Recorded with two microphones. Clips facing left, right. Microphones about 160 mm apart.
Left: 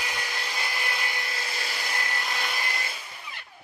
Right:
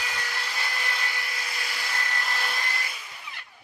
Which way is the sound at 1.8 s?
20° left (ahead or behind).